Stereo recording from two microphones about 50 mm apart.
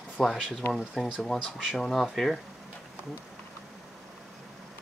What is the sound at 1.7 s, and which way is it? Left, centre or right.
Speech, centre.